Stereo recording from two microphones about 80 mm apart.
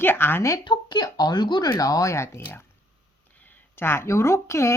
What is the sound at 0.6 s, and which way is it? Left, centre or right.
Speech, left.